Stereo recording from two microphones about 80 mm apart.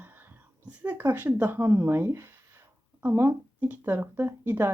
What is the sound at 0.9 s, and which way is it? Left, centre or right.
Speech, right.